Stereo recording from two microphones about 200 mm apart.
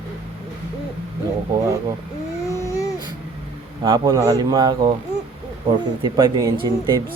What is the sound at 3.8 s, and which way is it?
A man's voice, 20° right (ahead or behind).